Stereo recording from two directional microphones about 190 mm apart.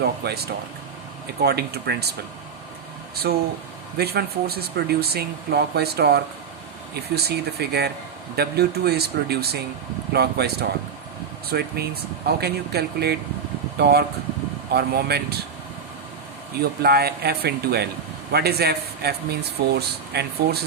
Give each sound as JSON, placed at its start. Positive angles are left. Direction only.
{"t": 0.2, "sound": "speech", "side_deg": -55}
{"t": 3.3, "sound": "speech", "side_deg": -55}
{"t": 16.8, "sound": "speech", "side_deg": -55}